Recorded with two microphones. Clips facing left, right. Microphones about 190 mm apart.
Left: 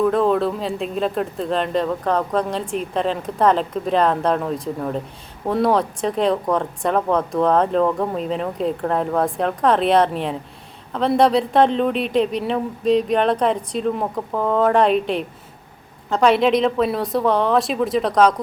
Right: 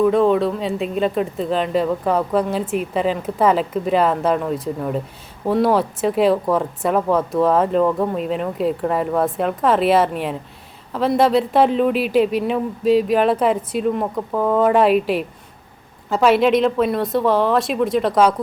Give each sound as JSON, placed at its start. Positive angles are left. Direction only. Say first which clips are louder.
{"t": 0.0, "sound": "speech", "louder": "right 2 dB", "side_deg": 0}